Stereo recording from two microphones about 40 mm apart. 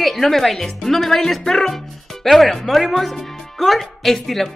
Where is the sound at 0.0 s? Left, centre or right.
Centre.